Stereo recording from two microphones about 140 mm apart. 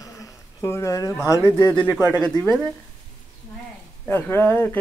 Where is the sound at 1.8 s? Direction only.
10° right (ahead or behind).